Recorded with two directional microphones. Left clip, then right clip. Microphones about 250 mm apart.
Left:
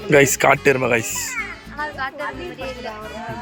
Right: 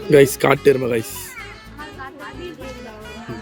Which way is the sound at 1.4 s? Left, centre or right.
Left.